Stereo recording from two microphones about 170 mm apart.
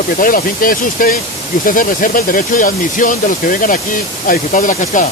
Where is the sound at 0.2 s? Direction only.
55° left (ahead or behind).